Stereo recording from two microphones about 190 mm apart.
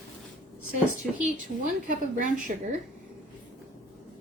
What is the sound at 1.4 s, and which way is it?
A woman's voice, 45° right (ahead or behind).